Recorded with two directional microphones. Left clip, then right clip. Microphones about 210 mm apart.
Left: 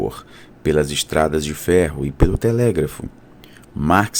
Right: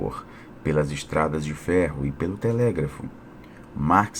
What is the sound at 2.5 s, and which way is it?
Speech, 90° left.